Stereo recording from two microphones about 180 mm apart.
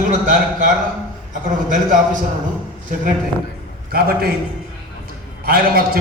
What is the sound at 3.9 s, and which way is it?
Speech, 60° right (ahead or behind).